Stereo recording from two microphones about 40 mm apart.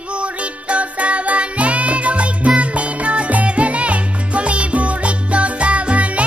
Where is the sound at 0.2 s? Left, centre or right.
Right.